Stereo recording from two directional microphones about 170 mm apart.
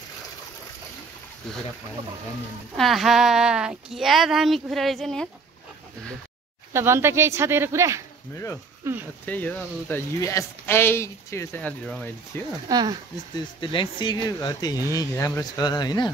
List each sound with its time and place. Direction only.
2.8 s a woman's voice: centre (ahead or behind)
6.7 s speech: 15° right (ahead or behind)
9.2 s speech: 10° left (ahead or behind)
12.6 s speech: 25° right (ahead or behind)
13.4 s speech: 30° left (ahead or behind)